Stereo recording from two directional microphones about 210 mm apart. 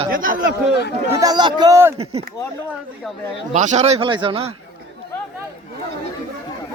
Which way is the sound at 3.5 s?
35° right (ahead or behind).